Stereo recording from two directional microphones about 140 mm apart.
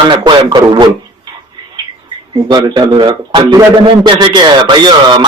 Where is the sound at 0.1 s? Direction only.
35° right (ahead or behind).